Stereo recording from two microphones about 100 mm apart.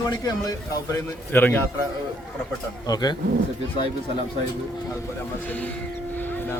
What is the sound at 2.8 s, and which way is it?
Speech, 45° left (ahead or behind).